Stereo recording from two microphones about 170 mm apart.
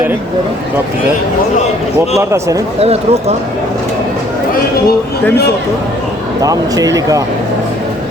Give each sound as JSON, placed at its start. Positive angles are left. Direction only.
{"t": 2.1, "sound": "speech", "side_deg": -15}
{"t": 2.8, "sound": "speech", "side_deg": -40}
{"t": 6.4, "sound": "speech", "side_deg": -20}